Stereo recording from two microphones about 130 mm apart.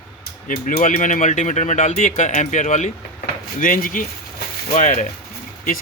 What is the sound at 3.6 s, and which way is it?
Speech, 90° left.